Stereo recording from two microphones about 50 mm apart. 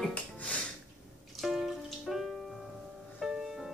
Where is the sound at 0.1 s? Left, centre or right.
Left.